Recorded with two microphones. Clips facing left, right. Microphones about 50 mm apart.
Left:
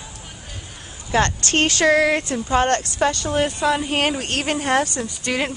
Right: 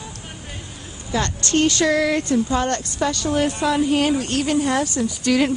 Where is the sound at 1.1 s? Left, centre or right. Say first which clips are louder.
Left 2 dB; left.